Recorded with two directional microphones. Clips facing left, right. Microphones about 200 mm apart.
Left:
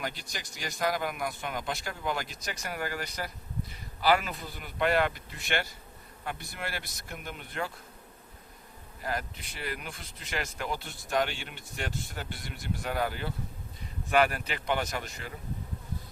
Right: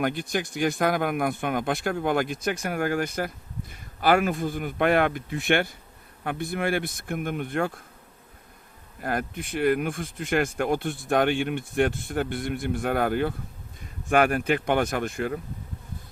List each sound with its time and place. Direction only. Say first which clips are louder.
0.0 s speech: right 12 dB; 55° right (ahead or behind)
9.0 s speech: right 6 dB; 55° right (ahead or behind)